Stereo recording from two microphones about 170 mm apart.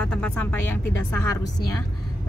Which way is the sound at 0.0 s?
5° left (ahead or behind).